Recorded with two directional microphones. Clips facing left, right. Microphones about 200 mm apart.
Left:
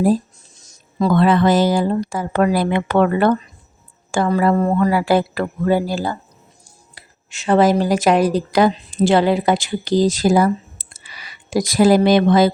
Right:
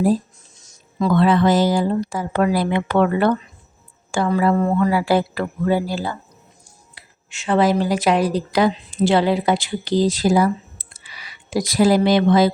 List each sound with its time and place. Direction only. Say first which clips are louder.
0.9 s speech: left 1 dB; 40° left (ahead or behind)